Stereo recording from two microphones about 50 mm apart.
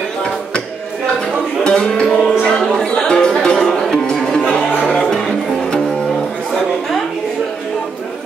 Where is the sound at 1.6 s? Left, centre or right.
Centre.